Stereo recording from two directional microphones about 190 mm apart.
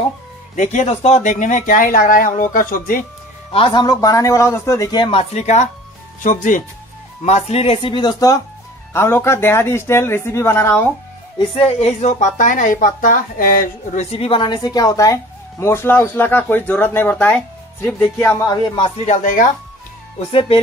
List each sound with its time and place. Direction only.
0.6 s speech: 40° left (ahead or behind)
3.5 s speech: 30° left (ahead or behind)
3.8 s speech: 20° left (ahead or behind)
11.3 s speech: 30° left (ahead or behind); by 14.0 s 50° left (ahead or behind)
14.1 s speech: 30° left (ahead or behind); by 18.3 s 10° left (ahead or behind)
18.3 s speech: 20° left (ahead or behind)
19.0 s speech: 45° left (ahead or behind)
20.3 s music: 30° left (ahead or behind)